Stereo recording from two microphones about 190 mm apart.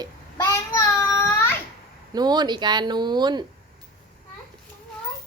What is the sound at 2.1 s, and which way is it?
Speech, 20° right (ahead or behind).